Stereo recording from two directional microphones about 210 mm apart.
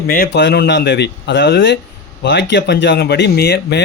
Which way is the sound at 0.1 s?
50° left (ahead or behind).